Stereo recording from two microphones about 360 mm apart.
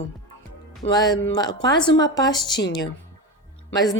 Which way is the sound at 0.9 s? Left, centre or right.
Centre.